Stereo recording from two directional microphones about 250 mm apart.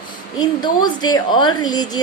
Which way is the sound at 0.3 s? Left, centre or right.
Centre.